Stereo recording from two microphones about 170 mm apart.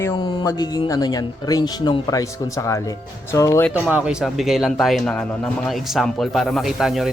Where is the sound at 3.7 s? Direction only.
10° right (ahead or behind).